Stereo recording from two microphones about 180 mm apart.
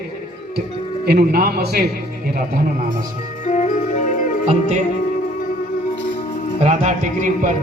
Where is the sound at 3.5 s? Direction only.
45° left (ahead or behind).